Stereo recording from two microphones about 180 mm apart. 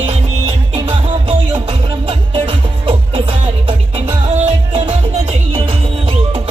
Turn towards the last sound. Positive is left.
turn(degrees=-30)  # may be behind; listen again after turning